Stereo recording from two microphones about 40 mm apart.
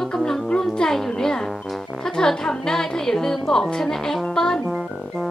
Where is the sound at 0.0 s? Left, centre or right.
Centre.